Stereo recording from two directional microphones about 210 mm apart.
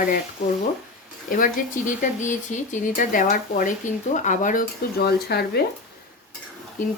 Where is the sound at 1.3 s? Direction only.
40° left (ahead or behind).